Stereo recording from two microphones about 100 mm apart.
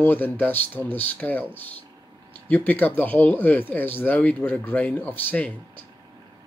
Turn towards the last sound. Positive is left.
turn(degrees=15)  # may be behind; listen again after turning